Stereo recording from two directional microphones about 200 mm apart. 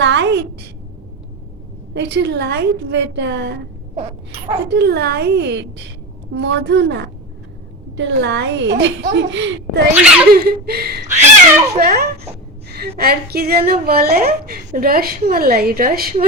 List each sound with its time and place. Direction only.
0.0 s a sound: 65° right (ahead or behind)
1.9 s a woman's voice: 60° right (ahead or behind)
4.7 s a woman's voice: 55° right (ahead or behind)
9.9 s speech: 10° right (ahead or behind)
10.3 s a woman's voice: 50° right (ahead or behind)
12.6 s a sound: 50° right (ahead or behind)
13.0 s a woman's voice: 50° right (ahead or behind)